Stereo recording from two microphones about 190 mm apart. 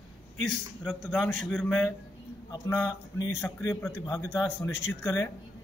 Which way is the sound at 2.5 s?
15° left (ahead or behind).